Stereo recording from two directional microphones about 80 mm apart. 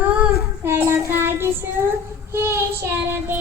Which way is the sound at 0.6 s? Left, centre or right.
Right.